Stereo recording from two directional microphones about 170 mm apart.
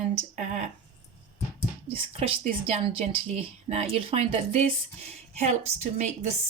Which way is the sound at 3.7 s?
35° right (ahead or behind).